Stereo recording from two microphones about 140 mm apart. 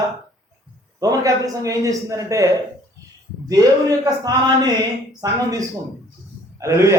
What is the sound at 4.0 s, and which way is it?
A man's voice, 25° right (ahead or behind).